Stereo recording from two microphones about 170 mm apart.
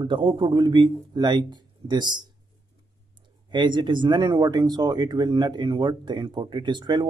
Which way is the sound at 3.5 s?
25° right (ahead or behind).